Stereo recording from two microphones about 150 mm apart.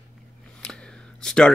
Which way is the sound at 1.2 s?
5° left (ahead or behind).